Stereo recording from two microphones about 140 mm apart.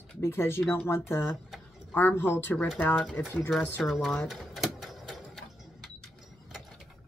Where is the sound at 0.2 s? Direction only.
15° left (ahead or behind).